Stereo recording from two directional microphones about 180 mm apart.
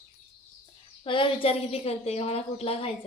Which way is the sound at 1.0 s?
30° left (ahead or behind).